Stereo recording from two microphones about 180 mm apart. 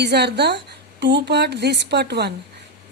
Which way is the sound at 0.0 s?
70° right (ahead or behind).